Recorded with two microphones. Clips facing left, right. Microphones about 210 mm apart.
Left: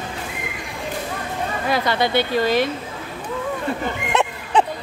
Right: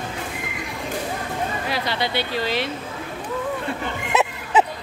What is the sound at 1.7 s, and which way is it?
Speech, 50° left (ahead or behind).